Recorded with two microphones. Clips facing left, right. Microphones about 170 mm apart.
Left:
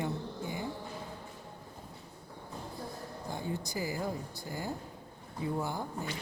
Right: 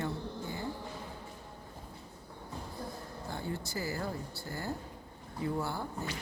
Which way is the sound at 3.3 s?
15° left (ahead or behind).